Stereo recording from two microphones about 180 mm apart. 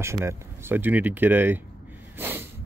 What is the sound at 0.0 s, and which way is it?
Speech, 15° right (ahead or behind).